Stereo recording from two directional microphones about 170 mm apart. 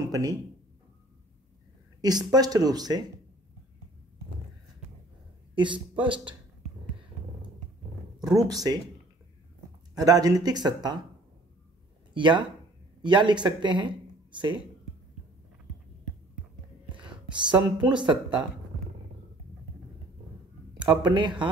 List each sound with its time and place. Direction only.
0.1 s speech: 20° right (ahead or behind)
2.0 s speech: 25° right (ahead or behind)
5.5 s speech: 30° right (ahead or behind)
8.6 s speech: 25° right (ahead or behind)
9.9 s speech: 20° right (ahead or behind)
12.1 s speech: 25° right (ahead or behind)
17.0 s a sound: 25° right (ahead or behind)
17.7 s speech: 25° right (ahead or behind)
20.7 s speech: 25° right (ahead or behind)